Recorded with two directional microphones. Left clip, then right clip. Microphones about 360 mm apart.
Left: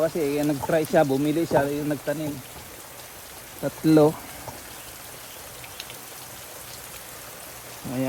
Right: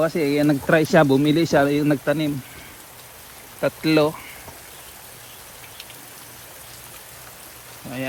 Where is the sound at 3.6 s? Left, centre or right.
Centre.